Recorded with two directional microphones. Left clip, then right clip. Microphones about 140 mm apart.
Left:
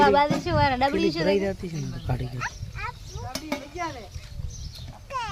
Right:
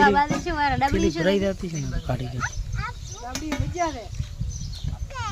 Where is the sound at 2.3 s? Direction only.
55° left (ahead or behind).